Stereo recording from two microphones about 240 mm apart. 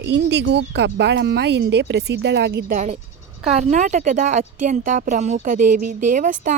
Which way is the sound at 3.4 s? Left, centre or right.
Right.